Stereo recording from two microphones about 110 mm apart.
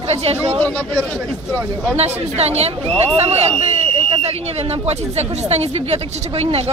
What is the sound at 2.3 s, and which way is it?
Speech, 75° right (ahead or behind).